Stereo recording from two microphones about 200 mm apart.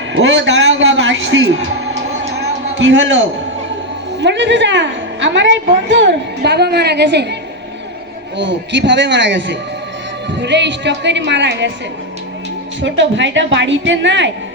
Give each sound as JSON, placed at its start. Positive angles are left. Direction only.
{"t": 0.1, "sound": "a sound", "side_deg": -70}
{"t": 2.7, "sound": "a man's voice", "side_deg": -70}
{"t": 8.4, "sound": "a woman's voice", "side_deg": -65}
{"t": 12.8, "sound": "a woman's voice", "side_deg": -65}